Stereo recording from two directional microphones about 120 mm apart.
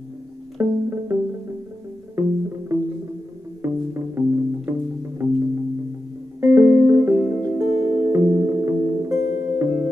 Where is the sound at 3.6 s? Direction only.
20° right (ahead or behind).